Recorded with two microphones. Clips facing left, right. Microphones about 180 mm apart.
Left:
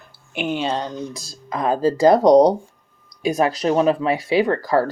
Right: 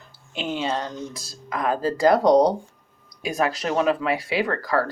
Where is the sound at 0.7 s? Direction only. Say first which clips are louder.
Left 3 dB; 35° left (ahead or behind).